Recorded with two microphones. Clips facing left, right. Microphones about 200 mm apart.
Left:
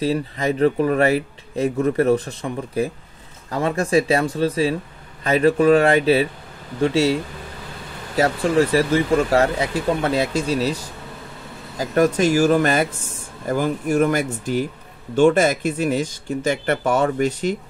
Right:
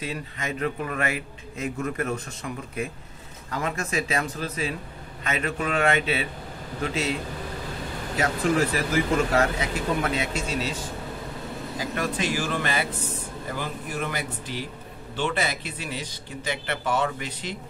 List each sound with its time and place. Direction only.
0.0 s speech: 35° left (ahead or behind)
8.2 s speech: 30° left (ahead or behind)